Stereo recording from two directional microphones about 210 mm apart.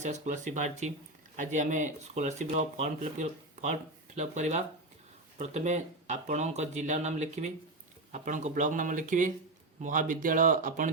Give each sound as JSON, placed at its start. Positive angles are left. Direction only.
{"t": 0.0, "sound": "speech", "side_deg": -35}